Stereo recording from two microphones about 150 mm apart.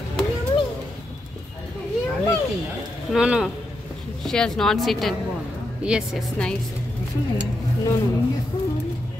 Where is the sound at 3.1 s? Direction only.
5° right (ahead or behind).